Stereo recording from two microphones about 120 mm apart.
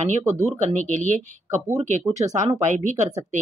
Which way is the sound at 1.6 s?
75° right (ahead or behind).